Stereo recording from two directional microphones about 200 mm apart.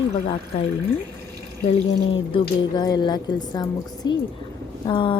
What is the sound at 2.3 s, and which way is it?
A woman's voice, 20° left (ahead or behind).